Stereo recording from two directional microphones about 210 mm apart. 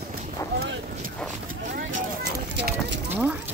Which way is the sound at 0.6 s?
50° right (ahead or behind).